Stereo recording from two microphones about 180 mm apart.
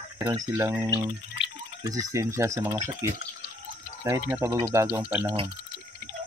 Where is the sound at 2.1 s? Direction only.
15° right (ahead or behind).